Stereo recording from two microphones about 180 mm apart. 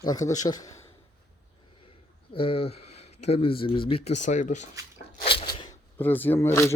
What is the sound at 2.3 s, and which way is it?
Speech, 30° left (ahead or behind).